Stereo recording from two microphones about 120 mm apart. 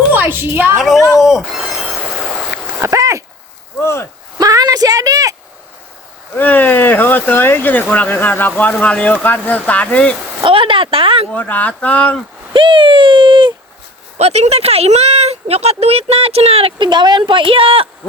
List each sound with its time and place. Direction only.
0.1 s a woman's voice: 15° right (ahead or behind)
0.8 s speech: centre (ahead or behind)
2.8 s speech: 25° right (ahead or behind)
3.8 s speech: 20° left (ahead or behind)
4.4 s a sound: 30° right (ahead or behind)
6.3 s speech: 15° left (ahead or behind)
10.4 s speech: 45° right (ahead or behind)
11.3 s speech: 15° left (ahead or behind)
12.5 s speech: 45° right (ahead or behind)
14.2 s speech: 60° right (ahead or behind)